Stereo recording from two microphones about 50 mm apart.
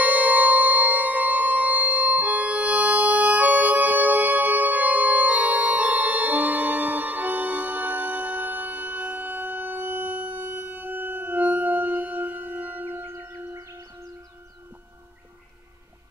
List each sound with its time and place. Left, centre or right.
0.0 s music: right
13.0 s music: right